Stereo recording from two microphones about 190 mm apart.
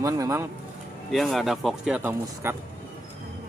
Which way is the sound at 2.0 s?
10° right (ahead or behind).